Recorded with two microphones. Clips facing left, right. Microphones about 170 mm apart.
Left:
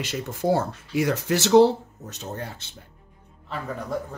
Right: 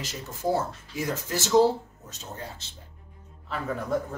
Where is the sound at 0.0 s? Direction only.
65° left (ahead or behind).